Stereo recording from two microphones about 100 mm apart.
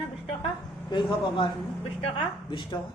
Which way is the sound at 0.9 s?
55° left (ahead or behind).